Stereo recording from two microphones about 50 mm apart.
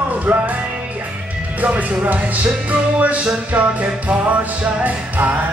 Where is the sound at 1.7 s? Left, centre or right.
Right.